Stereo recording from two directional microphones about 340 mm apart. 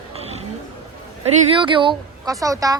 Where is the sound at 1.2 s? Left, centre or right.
Centre.